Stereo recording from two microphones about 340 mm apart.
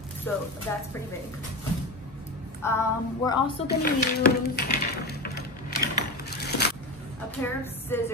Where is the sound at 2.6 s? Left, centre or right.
Centre.